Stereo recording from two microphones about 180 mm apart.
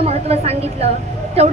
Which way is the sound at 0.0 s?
35° right (ahead or behind).